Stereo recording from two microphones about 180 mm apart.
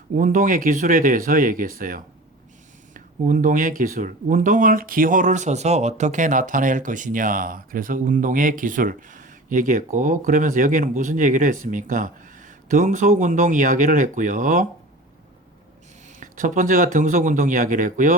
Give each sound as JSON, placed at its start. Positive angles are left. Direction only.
{"t": 0.2, "sound": "speech", "side_deg": -45}
{"t": 16.2, "sound": "speech", "side_deg": -45}